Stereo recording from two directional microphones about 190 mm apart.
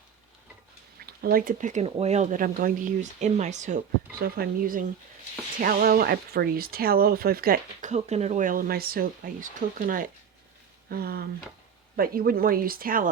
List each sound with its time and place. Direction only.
1.0 s speech: 50° right (ahead or behind)
4.2 s speech: 50° right (ahead or behind)